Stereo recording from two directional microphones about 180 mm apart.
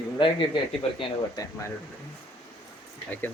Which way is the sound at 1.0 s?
25° left (ahead or behind).